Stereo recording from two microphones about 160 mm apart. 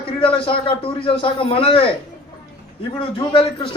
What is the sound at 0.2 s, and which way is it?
Speech, 35° left (ahead or behind).